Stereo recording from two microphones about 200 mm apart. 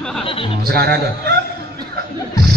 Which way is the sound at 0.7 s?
55° right (ahead or behind).